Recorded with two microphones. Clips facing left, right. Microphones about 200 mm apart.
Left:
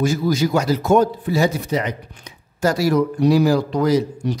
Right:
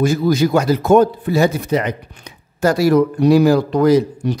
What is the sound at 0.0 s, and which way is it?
Speech, 55° right (ahead or behind).